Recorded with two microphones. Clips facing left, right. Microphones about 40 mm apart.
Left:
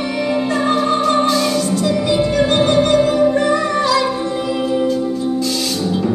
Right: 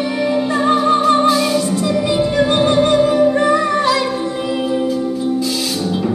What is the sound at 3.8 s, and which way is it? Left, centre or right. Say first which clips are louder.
Music: even; right.